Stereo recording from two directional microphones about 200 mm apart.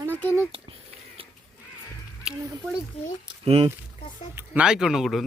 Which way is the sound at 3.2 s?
30° right (ahead or behind).